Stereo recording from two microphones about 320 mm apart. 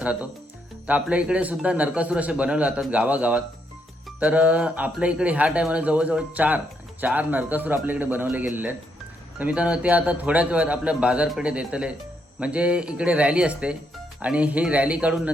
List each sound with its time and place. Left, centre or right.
0.0 s a man's voice: centre